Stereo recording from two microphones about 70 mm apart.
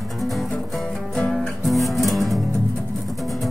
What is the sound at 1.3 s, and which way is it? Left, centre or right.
Music, centre.